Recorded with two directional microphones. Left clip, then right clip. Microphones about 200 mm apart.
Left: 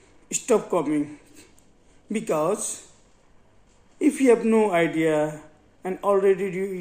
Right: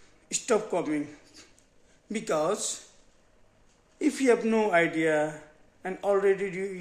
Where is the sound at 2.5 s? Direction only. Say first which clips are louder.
Left 3 dB; 55° right (ahead or behind).